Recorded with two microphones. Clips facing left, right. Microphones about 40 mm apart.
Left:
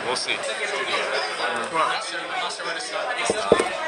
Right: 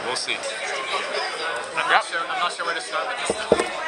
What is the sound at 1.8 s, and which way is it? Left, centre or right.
Speech, right.